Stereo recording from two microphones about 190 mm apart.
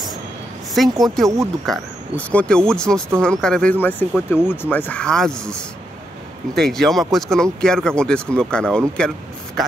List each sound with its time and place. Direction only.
0.8 s speech: centre (ahead or behind)
1.2 s speech: 15° right (ahead or behind)
1.7 s speech: 5° left (ahead or behind)